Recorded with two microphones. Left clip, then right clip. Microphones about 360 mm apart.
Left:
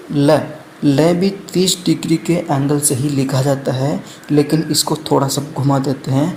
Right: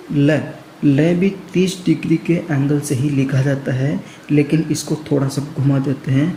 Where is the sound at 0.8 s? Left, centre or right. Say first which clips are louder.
Left 2 dB; left.